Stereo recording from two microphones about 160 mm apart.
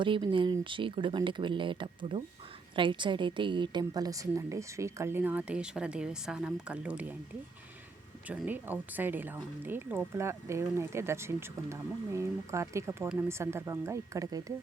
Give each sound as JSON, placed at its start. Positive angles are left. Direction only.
{"t": 0.0, "sound": "a woman's voice", "side_deg": -30}
{"t": 8.3, "sound": "speech", "side_deg": -10}